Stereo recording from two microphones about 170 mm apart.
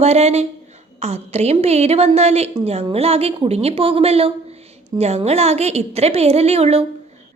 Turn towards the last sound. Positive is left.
turn(degrees=-35)  # may be behind; listen again after turning